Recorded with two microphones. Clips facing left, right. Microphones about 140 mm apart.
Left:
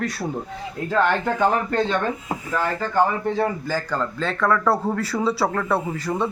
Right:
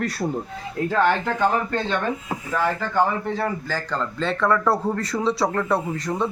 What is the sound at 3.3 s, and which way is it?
Speech, 15° left (ahead or behind).